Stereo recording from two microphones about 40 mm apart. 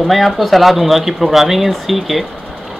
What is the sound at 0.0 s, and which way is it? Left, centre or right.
Speech, centre.